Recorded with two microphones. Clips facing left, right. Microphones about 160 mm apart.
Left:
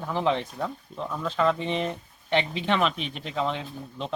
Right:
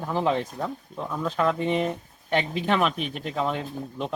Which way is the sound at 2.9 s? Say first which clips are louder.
Right 3 dB; 45° right (ahead or behind).